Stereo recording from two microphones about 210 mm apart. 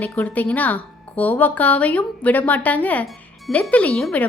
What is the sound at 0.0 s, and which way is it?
A woman's voice, 10° left (ahead or behind).